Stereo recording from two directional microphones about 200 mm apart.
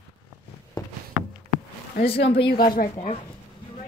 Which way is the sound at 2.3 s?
30° left (ahead or behind).